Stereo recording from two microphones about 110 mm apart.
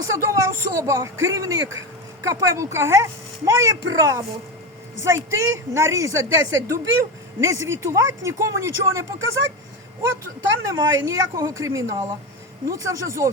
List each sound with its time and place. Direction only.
0.0 s speech: 25° right (ahead or behind)
10.5 s a woman's voice: 30° right (ahead or behind)